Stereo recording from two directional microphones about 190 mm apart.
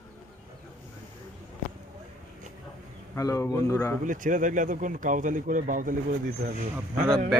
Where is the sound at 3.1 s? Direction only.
15° left (ahead or behind).